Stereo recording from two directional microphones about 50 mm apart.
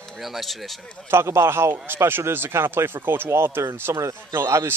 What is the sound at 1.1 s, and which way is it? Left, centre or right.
A man's voice, right.